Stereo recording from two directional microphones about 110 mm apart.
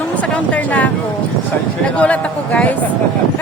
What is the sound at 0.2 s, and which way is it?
Speech, 10° left (ahead or behind).